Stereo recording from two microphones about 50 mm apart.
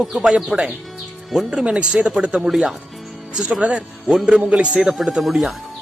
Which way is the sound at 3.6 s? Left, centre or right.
Right.